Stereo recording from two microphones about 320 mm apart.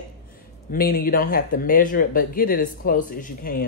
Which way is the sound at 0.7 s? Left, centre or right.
Left.